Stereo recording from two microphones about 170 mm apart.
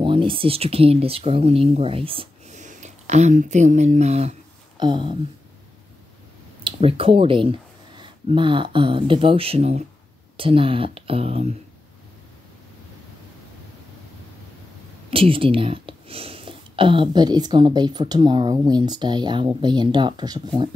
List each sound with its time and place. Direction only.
0.0 s speech: 30° right (ahead or behind)
2.5 s speech: 45° right (ahead or behind)
4.7 s speech: 25° right (ahead or behind)
6.6 s speech: 35° right (ahead or behind)
15.0 s speech: 30° right (ahead or behind)